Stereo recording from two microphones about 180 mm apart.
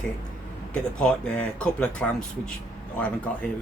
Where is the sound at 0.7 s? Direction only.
5° left (ahead or behind).